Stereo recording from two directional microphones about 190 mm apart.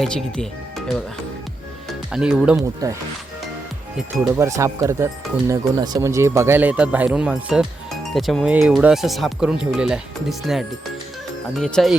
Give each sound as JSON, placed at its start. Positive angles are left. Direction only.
{"t": 0.0, "sound": "speech", "side_deg": 5}
{"t": 2.0, "sound": "speech", "side_deg": -5}
{"t": 2.8, "sound": "speech", "side_deg": -20}
{"t": 3.9, "sound": "speech", "side_deg": -5}